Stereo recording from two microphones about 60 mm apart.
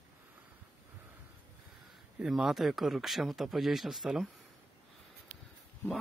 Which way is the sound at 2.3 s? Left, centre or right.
Centre.